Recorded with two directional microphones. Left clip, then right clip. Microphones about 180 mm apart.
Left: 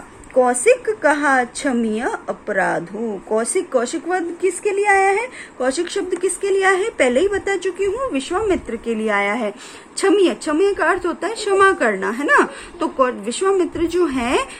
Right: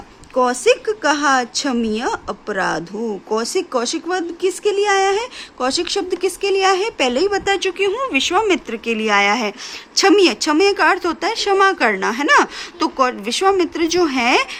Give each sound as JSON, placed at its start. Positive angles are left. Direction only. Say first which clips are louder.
{"t": 0.3, "sound": "a woman's voice", "louder": "left 1 dB", "side_deg": -45}